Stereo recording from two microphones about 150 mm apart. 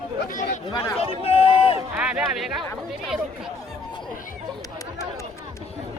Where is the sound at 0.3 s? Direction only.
60° left (ahead or behind).